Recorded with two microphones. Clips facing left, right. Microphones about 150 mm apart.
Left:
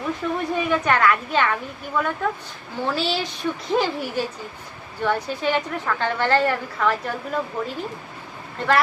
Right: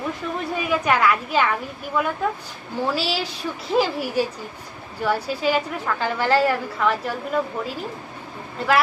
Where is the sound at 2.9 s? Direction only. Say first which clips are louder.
Left 1 dB; 5° right (ahead or behind).